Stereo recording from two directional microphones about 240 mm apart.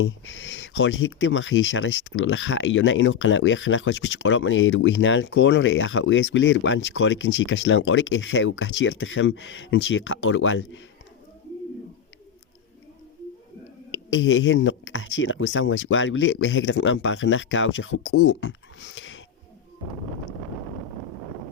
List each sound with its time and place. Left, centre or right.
0.0 s speech: left
13.9 s speech: left